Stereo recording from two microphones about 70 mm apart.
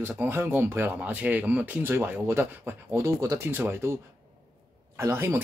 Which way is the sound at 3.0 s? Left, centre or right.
Right.